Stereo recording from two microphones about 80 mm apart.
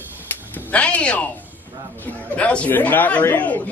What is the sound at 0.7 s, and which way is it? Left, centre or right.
Speech, centre.